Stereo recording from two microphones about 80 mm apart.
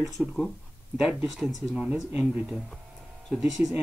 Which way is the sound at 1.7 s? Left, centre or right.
Centre.